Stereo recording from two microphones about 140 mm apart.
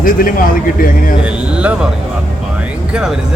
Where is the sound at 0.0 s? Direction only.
85° left.